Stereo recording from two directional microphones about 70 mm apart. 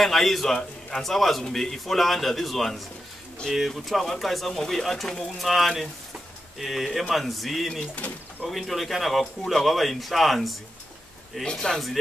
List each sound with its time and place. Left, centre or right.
0.0 s a man's voice: centre
7.9 s speech: centre
8.5 s a man's voice: centre